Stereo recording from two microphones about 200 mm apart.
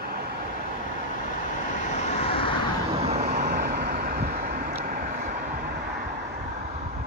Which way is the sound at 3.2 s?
50° right (ahead or behind).